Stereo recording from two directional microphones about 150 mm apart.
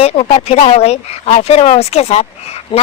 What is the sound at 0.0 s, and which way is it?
Speech, 40° left (ahead or behind).